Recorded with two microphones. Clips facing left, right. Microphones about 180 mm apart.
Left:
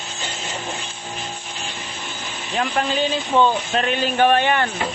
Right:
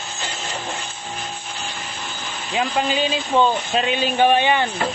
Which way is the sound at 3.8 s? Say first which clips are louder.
Even; 15° right (ahead or behind).